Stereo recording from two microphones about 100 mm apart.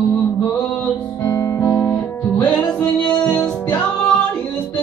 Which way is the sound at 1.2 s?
30° left (ahead or behind).